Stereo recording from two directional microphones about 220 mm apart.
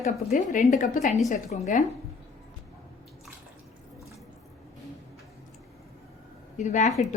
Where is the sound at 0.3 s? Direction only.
40° left (ahead or behind).